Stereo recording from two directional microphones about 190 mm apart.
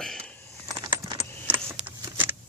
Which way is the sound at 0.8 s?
20° right (ahead or behind).